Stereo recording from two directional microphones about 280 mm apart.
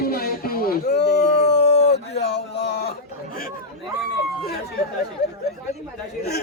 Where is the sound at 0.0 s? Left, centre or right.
Left.